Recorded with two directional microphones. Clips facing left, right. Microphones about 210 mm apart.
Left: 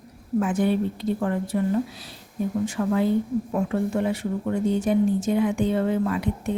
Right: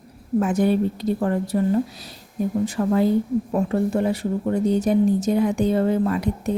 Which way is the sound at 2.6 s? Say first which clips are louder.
Right 3 dB; 35° right (ahead or behind).